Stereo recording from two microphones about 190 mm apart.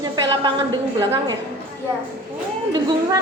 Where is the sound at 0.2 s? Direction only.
25° right (ahead or behind).